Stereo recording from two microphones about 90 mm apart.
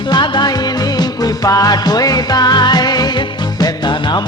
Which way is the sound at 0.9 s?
40° left (ahead or behind).